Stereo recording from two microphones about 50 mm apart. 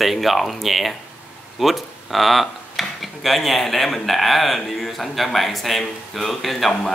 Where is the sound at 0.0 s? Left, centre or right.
Centre.